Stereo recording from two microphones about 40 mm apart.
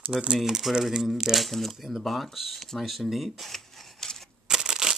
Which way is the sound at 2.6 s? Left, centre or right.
Centre.